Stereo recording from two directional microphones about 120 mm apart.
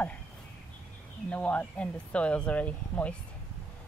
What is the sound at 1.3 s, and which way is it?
Speech, 15° left (ahead or behind).